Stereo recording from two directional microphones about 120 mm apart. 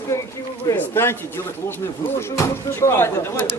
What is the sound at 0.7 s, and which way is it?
Speech, 15° left (ahead or behind).